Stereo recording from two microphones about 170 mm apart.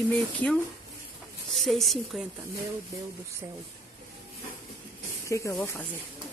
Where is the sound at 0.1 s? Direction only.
10° left (ahead or behind).